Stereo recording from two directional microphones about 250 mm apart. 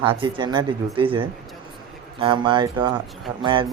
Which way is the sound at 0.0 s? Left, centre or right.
Centre.